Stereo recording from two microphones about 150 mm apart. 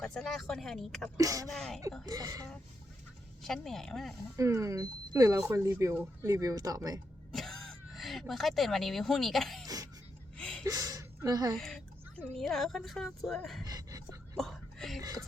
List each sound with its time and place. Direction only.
0.0 s speech: centre (ahead or behind)
1.1 s speech: 20° right (ahead or behind)
1.5 s speech: 5° left (ahead or behind)
2.0 s speech: 25° right (ahead or behind)
3.4 s speech: centre (ahead or behind)
4.4 s speech: 20° right (ahead or behind)
7.3 s speech: centre (ahead or behind)
9.6 s throat clearing: 25° right (ahead or behind)
10.3 s a sound: 5° left (ahead or behind)
10.7 s speech: 25° right (ahead or behind)
11.5 s a sound: 5° left (ahead or behind)
12.4 s speech: centre (ahead or behind)
13.7 s a sound: 25° right (ahead or behind)
14.3 s a sound: 5° left (ahead or behind)